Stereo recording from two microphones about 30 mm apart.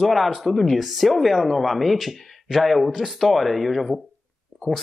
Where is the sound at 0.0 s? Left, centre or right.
Centre.